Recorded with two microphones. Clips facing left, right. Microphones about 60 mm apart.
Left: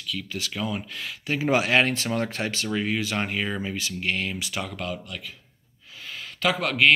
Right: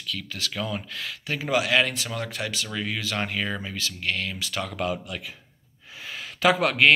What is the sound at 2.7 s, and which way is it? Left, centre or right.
Speech, left.